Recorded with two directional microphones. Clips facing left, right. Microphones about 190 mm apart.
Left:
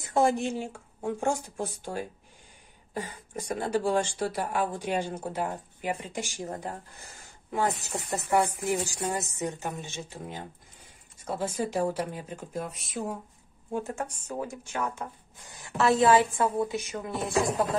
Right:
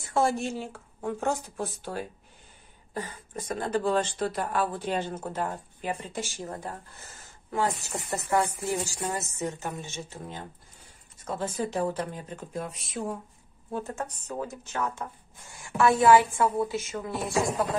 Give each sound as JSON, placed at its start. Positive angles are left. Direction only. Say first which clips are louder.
{"t": 0.0, "sound": "speech", "louder": "left 1 dB", "side_deg": 15}
{"t": 13.7, "sound": "a woman's voice", "louder": "left 1 dB", "side_deg": 15}